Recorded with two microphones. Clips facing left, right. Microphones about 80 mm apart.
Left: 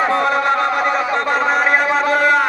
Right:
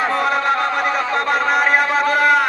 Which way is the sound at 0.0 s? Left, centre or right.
Centre.